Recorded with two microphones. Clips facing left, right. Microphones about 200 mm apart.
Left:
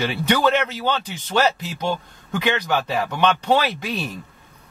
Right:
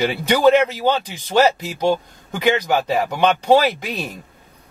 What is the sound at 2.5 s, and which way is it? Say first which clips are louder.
Speech: right 4 dB; 10° right (ahead or behind).